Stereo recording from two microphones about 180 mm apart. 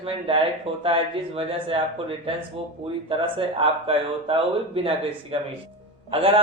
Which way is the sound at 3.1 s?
30° right (ahead or behind).